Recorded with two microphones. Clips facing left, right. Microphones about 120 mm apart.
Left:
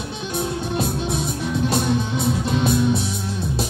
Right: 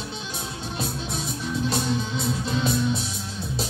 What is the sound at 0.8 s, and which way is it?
Music, 55° left (ahead or behind).